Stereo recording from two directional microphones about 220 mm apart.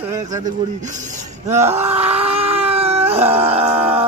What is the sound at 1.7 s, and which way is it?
Dog, 30° right (ahead or behind).